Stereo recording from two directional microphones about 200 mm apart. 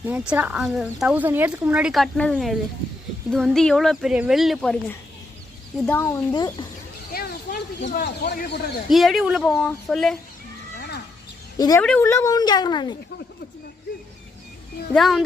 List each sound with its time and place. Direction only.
0.1 s speech: 10° right (ahead or behind); by 6.7 s 20° left (ahead or behind)
7.1 s snake: 50° left (ahead or behind)
8.0 s speech: 50° left (ahead or behind)
8.9 s speech: centre (ahead or behind)
10.8 s a sound: 55° left (ahead or behind)
11.5 s speech: 20° left (ahead or behind)
11.8 s speech: 10° left (ahead or behind)
14.9 s speech: centre (ahead or behind)